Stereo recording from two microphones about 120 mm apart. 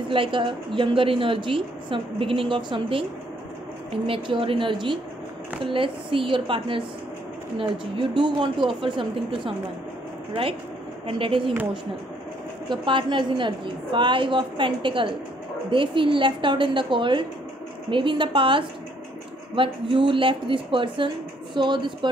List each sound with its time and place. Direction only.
0.1 s a woman's voice: 45° right (ahead or behind)
11.1 s a woman's voice: 45° right (ahead or behind)
12.6 s a woman's voice: 40° right (ahead or behind)